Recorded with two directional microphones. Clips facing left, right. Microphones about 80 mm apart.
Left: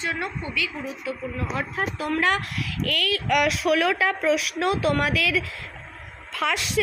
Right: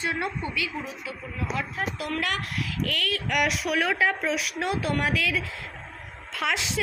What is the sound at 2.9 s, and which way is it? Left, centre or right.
A woman's voice, left.